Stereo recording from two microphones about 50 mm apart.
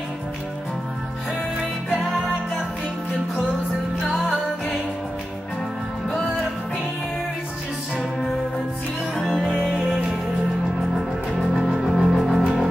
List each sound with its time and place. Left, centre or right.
2.0 s music: centre
9.1 s music: centre
9.8 s music: centre
11.3 s music: centre